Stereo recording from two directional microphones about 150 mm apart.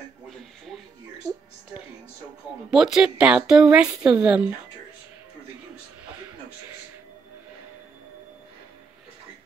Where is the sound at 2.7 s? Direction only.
5° right (ahead or behind).